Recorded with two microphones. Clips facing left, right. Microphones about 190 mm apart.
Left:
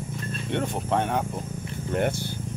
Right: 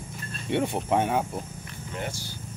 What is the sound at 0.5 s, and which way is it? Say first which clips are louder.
Speech: right 2 dB; 10° right (ahead or behind).